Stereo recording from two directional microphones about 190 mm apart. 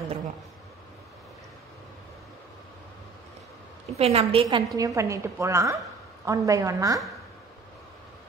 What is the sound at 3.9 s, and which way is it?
Speech, 30° right (ahead or behind).